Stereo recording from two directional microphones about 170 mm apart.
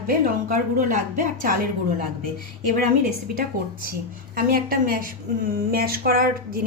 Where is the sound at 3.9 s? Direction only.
55° right (ahead or behind).